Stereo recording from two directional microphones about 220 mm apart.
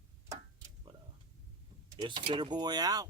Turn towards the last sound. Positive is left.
turn(degrees=-15)  # may be behind; listen again after turning